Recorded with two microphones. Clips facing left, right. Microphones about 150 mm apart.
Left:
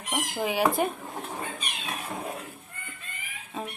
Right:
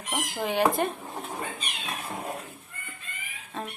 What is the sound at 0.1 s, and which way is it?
Speech, 5° left (ahead or behind).